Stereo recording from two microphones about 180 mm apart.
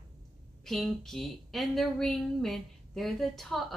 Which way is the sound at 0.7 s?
Centre (ahead or behind).